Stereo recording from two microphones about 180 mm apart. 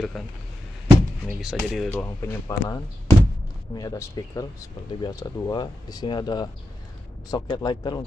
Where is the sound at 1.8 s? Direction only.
10° left (ahead or behind).